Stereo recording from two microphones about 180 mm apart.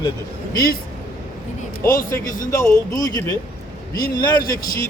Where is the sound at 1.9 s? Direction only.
50° left (ahead or behind).